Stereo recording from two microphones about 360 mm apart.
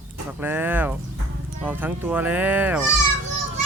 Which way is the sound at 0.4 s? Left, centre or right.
Centre.